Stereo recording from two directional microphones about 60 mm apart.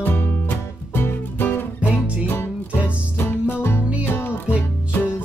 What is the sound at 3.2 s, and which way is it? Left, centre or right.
Music, left.